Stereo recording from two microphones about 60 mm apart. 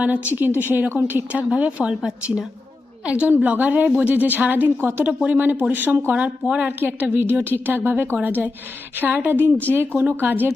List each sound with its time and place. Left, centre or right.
0.3 s a woman's voice: right
3.0 s a woman's voice: centre
4.8 s a woman's voice: right
5.0 s a woman's voice: right
6.6 s a woman's voice: right